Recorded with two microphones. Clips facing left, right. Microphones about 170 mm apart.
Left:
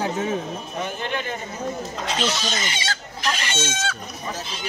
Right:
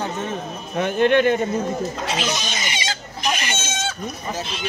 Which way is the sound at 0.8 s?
70° right (ahead or behind).